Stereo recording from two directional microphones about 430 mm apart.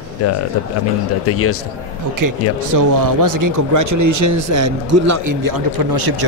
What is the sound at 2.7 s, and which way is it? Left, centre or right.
A man's voice, right.